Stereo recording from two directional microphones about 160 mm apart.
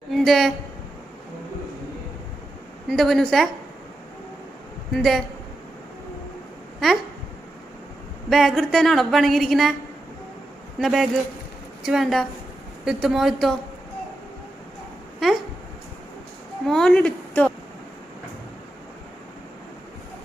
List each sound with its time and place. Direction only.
0.1 s a sound: centre (ahead or behind)
2.9 s a woman's voice: centre (ahead or behind)
4.9 s a woman's voice: centre (ahead or behind)
6.7 s a sound: centre (ahead or behind)
8.3 s a woman's voice: centre (ahead or behind)
10.8 s a woman's voice: centre (ahead or behind)
16.6 s a woman's voice: 5° left (ahead or behind)